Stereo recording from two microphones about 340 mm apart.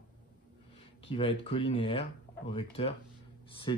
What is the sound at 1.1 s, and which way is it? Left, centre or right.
Speech, centre.